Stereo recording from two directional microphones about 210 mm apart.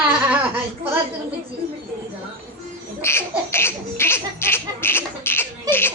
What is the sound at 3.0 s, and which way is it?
Baby laughter, 10° left (ahead or behind).